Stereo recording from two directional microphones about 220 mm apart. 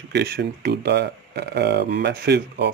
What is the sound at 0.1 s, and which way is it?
Speech, 50° right (ahead or behind).